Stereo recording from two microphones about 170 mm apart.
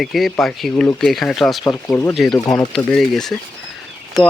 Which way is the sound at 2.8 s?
5° left (ahead or behind).